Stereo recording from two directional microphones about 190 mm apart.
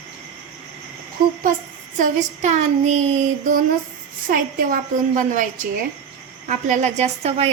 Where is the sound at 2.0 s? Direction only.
40° right (ahead or behind).